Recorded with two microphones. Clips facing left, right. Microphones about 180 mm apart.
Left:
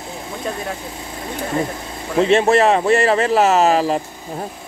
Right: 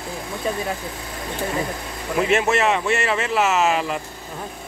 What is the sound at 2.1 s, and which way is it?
Speech, 30° left (ahead or behind).